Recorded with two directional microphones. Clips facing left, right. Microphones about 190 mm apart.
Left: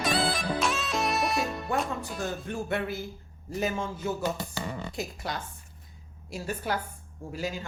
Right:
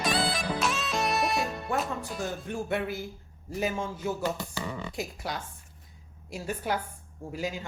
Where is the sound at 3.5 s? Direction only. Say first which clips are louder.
Even; 10° right (ahead or behind).